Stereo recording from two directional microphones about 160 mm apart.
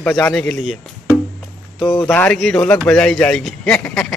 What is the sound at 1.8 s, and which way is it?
Speech, 30° left (ahead or behind).